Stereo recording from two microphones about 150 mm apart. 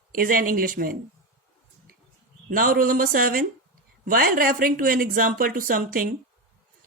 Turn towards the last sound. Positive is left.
turn(degrees=-70)  # may be behind; listen again after turning